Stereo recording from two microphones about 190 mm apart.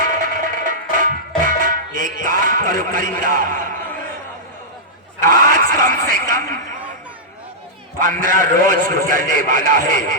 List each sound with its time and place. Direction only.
0.0 s music: 45° right (ahead or behind)
5.2 s speech: 45° right (ahead or behind)
7.9 s a man's voice: 45° right (ahead or behind)